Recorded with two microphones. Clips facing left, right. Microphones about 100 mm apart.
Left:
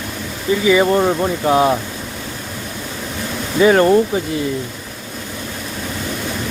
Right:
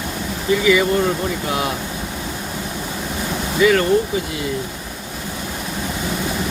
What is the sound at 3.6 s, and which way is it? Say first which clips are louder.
Speech: left 3 dB; 35° left (ahead or behind).